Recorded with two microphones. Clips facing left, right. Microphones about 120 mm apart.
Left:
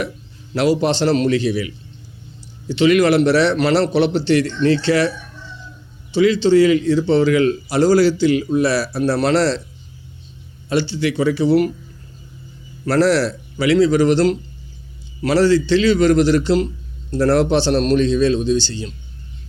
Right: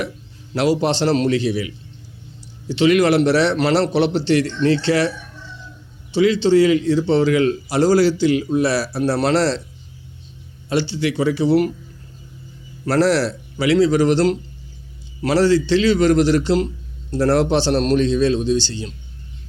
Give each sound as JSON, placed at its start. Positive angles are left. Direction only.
{"t": 0.5, "sound": "a man's voice", "side_deg": -25}
{"t": 10.7, "sound": "a man's voice", "side_deg": -25}
{"t": 12.8, "sound": "a man's voice", "side_deg": -25}